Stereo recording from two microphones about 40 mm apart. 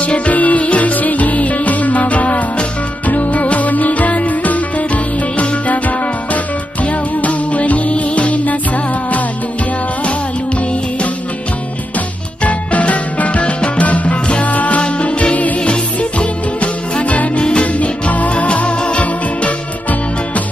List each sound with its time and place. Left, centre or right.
0.0 s music: left
12.4 s music: left
17.4 s music: left